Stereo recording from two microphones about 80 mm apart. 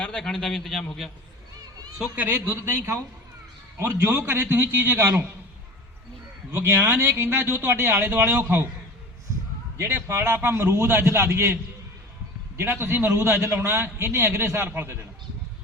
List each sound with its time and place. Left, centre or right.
0.0 s a man's voice: centre
2.1 s a man's voice: right
6.5 s a man's voice: right
9.7 s a man's voice: right